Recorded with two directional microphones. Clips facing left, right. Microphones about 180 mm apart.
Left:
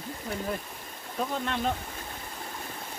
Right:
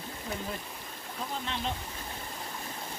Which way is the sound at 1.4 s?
50° left (ahead or behind).